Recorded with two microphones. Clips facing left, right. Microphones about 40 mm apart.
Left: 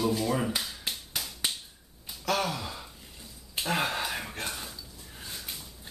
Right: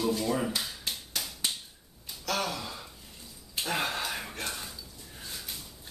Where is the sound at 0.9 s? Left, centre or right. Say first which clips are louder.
Left 2 dB; centre.